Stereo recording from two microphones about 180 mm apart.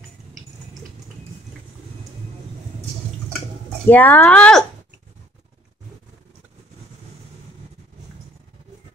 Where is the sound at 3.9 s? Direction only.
10° left (ahead or behind).